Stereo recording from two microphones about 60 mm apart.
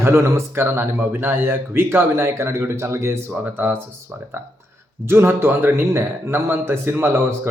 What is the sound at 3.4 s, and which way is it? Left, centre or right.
Speech, right.